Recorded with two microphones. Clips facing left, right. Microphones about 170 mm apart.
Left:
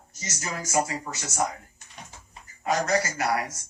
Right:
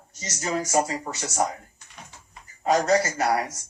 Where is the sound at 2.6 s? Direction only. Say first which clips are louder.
Right 4 dB; 30° right (ahead or behind).